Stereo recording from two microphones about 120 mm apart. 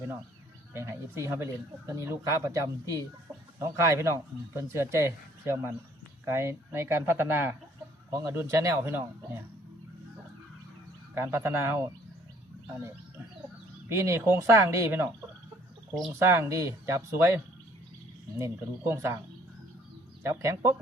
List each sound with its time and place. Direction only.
0.7 s speech: 20° right (ahead or behind)
11.1 s speech: 20° right (ahead or behind)
13.9 s speech: 20° right (ahead or behind)
16.1 s speech: 20° right (ahead or behind)
20.2 s speech: 25° right (ahead or behind)